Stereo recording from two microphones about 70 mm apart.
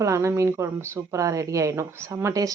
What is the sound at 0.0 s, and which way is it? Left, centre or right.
Speech, right.